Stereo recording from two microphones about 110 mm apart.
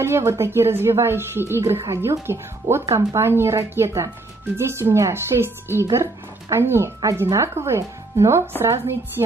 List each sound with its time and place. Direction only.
0.0 s speech: 25° right (ahead or behind)